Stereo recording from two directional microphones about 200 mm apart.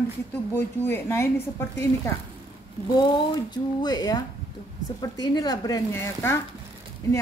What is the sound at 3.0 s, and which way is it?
Speech, 20° left (ahead or behind).